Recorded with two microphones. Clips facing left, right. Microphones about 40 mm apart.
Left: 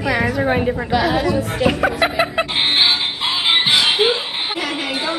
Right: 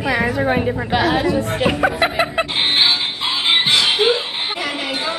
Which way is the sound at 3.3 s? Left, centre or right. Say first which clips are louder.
Even; left.